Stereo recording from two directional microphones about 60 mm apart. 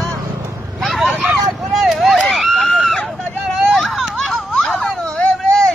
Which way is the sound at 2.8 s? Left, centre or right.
Centre.